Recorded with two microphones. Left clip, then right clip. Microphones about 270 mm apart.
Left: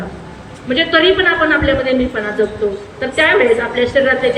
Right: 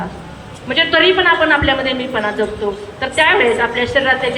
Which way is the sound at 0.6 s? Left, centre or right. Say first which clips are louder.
Even; centre.